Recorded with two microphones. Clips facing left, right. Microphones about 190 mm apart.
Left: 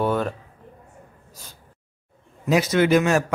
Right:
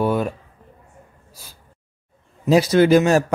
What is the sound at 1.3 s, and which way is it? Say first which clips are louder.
Gasp: even; 10° right (ahead or behind).